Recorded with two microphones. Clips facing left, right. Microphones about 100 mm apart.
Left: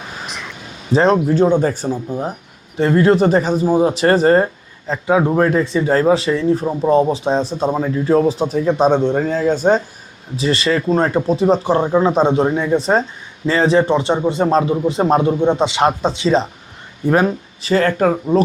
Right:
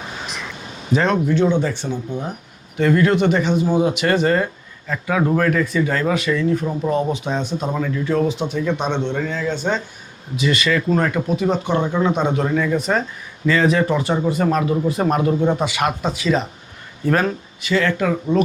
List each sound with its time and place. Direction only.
0.3 s a sound: centre (ahead or behind)
0.9 s speech: 35° left (ahead or behind)
4.9 s speech: 25° left (ahead or behind)
17.1 s speech: 15° left (ahead or behind)
17.6 s speech: 40° left (ahead or behind)